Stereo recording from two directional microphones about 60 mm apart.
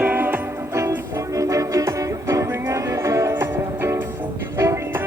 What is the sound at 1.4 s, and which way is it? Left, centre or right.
Music, right.